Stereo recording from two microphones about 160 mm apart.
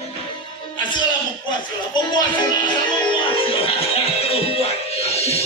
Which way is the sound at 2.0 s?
25° left (ahead or behind).